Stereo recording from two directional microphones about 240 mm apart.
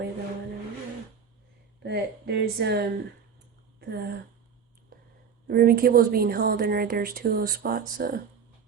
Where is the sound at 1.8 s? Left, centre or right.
Right.